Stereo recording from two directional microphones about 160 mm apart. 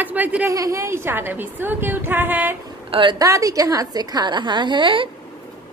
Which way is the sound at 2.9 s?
30° right (ahead or behind).